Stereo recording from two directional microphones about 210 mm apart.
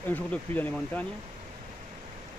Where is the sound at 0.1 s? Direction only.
10° left (ahead or behind).